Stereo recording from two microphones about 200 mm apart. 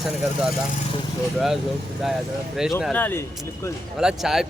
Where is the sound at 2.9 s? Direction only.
10° left (ahead or behind).